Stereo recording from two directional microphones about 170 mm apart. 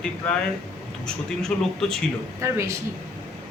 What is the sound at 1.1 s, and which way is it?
Speech, 5° left (ahead or behind).